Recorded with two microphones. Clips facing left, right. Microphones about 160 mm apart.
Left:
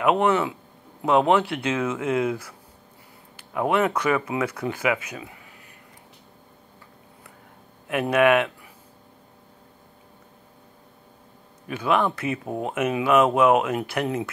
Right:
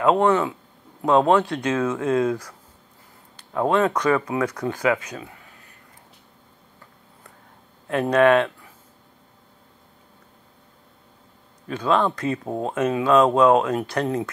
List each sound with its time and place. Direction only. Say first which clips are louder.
0.2 s speech: right 2 dB; 20° left (ahead or behind)
3.5 s speech: right 2 dB; 15° left (ahead or behind)
7.9 s speech: right 2 dB; 15° left (ahead or behind)
11.6 s speech: right 2 dB; 15° left (ahead or behind)
12.4 s speech: right 2 dB; 25° right (ahead or behind)
12.7 s speech: right 2 dB; 15° left (ahead or behind)